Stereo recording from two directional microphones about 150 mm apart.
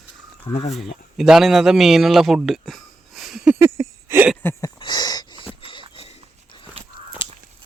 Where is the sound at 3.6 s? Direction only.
15° right (ahead or behind).